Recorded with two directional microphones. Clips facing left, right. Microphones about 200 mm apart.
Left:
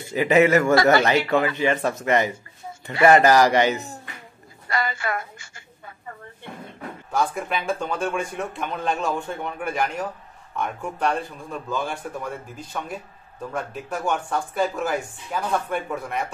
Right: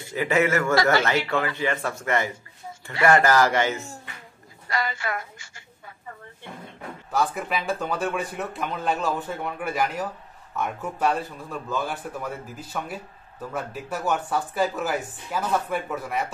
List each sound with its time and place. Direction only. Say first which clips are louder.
0.1 s speech: left 5 dB; 20° left (ahead or behind)
4.6 s a woman's voice: left 2 dB; 50° left (ahead or behind)
7.1 s speech: left 1 dB; centre (ahead or behind)